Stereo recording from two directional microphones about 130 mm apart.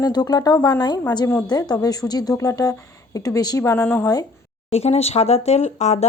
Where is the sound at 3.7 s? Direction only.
15° left (ahead or behind).